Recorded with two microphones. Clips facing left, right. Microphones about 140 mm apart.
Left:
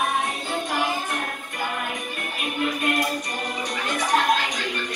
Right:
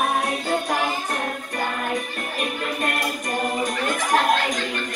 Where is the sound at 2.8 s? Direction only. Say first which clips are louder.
Left 1 dB; 45° right (ahead or behind).